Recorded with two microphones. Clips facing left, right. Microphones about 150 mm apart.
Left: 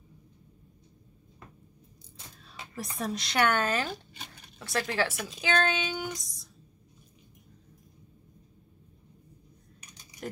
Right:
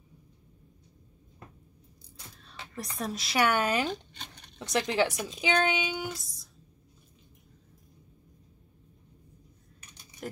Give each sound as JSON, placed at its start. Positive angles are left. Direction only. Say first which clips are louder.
{"t": 2.3, "sound": "speech", "louder": "even", "side_deg": 5}
{"t": 3.9, "sound": "a sound", "louder": "right 3 dB", "side_deg": 5}
{"t": 4.6, "sound": "speech", "louder": "right 3 dB", "side_deg": -20}
{"t": 6.1, "sound": "speech", "louder": "left 2 dB", "side_deg": 0}